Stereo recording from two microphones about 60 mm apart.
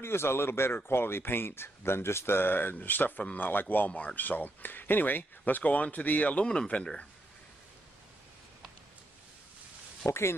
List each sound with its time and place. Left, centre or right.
0.0 s a man's voice: left
6.4 s speech: centre
10.0 s a man's voice: left